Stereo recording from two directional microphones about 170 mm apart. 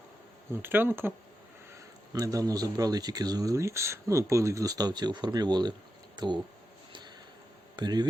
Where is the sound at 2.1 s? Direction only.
20° right (ahead or behind).